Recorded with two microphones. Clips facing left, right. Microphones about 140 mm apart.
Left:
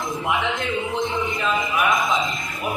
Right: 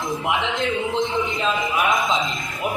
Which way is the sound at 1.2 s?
20° right (ahead or behind).